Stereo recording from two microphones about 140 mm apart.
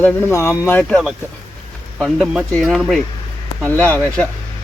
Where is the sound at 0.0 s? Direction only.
15° left (ahead or behind).